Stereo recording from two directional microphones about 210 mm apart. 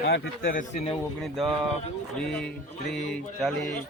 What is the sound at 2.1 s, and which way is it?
A man's voice, 5° left (ahead or behind).